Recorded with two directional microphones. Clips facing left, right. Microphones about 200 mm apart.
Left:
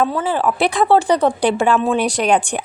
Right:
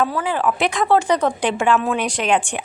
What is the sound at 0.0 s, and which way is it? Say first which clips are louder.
Speech: left 2 dB; 25° left (ahead or behind).